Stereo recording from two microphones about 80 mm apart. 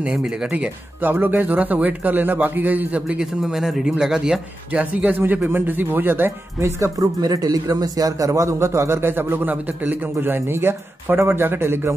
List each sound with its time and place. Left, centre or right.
0.0 s speech: centre; by 6.7 s right
6.8 s a man's voice: right